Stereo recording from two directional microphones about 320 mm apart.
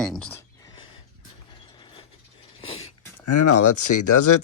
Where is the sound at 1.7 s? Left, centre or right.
Centre.